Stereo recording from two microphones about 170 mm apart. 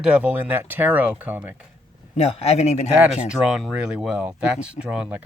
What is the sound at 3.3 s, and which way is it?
Speech, 5° right (ahead or behind).